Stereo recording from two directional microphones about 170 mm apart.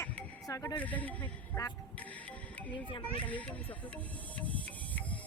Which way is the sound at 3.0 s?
10° left (ahead or behind).